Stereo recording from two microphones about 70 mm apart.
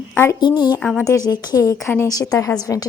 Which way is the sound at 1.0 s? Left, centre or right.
Left.